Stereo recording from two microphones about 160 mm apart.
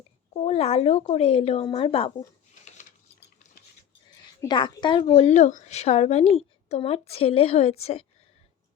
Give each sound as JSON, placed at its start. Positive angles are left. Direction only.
{"t": 0.3, "sound": "a woman's voice", "side_deg": 40}
{"t": 4.4, "sound": "a woman's voice", "side_deg": 30}